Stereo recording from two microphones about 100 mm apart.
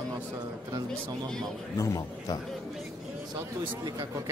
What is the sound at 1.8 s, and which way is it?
Speech, 30° left (ahead or behind).